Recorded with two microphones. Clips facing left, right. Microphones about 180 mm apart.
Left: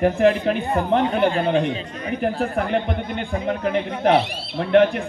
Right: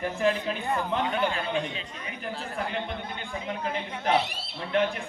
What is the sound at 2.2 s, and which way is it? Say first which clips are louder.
Speech: left 10 dB; 60° left (ahead or behind).